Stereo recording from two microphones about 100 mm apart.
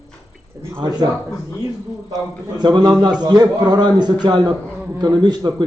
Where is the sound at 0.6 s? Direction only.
25° right (ahead or behind).